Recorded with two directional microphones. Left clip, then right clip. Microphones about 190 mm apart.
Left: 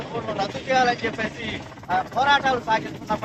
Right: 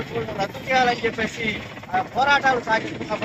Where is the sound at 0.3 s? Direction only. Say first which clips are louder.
Even; 20° right (ahead or behind).